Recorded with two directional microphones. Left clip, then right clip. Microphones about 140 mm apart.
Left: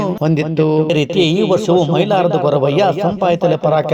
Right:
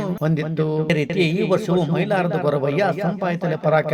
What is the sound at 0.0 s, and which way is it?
Speech, 50° left (ahead or behind).